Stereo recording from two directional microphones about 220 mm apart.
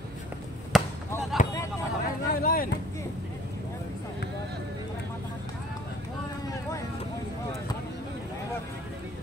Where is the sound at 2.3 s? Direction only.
40° left (ahead or behind).